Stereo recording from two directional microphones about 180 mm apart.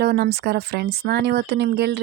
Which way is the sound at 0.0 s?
65° right (ahead or behind).